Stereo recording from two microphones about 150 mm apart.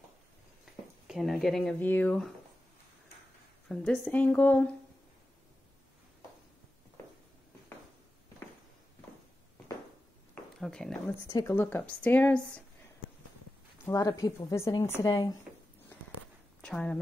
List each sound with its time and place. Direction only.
1.0 s speech: centre (ahead or behind)
3.6 s a woman's voice: 5° left (ahead or behind)
10.6 s speech: 5° left (ahead or behind)
11.2 s speech: 20° left (ahead or behind)
13.8 s a woman's voice: 20° left (ahead or behind)
16.6 s a woman's voice: 5° left (ahead or behind)